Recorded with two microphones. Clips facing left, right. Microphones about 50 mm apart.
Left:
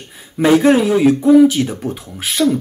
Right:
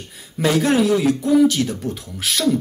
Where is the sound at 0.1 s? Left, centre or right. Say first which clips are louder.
Left 7 dB; centre.